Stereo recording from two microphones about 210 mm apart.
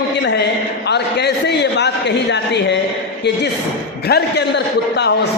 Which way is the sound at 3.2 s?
55° left (ahead or behind).